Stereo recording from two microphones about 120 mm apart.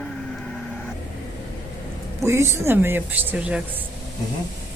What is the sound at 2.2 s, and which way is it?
Speech, 20° right (ahead or behind).